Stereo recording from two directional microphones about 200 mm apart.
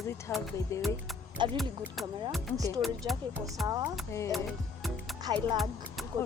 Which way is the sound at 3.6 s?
20° right (ahead or behind).